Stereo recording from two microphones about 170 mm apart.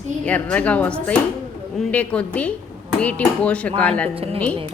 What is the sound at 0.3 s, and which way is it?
A woman's voice, 10° left (ahead or behind).